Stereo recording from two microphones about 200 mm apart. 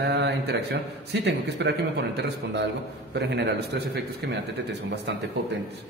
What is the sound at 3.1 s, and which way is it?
Speech, 60° right (ahead or behind).